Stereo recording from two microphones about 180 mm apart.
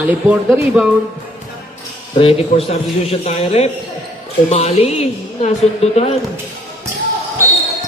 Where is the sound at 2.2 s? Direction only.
30° left (ahead or behind).